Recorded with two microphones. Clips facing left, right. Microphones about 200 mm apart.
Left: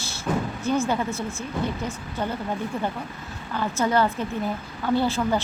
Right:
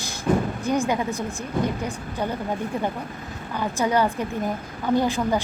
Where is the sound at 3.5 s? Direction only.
15° right (ahead or behind).